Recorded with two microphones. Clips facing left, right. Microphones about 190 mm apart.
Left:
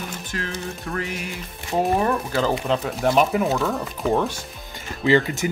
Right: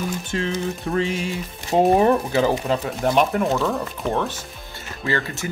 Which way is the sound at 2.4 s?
10° right (ahead or behind).